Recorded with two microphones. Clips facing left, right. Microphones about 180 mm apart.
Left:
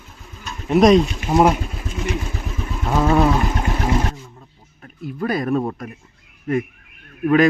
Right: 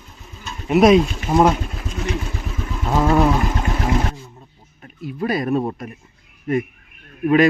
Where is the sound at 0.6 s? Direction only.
5° right (ahead or behind).